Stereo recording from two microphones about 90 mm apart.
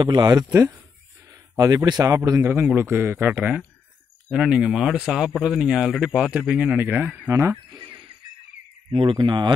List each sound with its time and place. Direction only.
0.0 s speech: 50° right (ahead or behind)
1.6 s speech: 40° right (ahead or behind)
2.5 s speech: 25° right (ahead or behind)
4.3 s speech: 5° right (ahead or behind)
7.2 s speech: 35° right (ahead or behind)
7.7 s music: 60° right (ahead or behind)
8.9 s speech: 70° right (ahead or behind)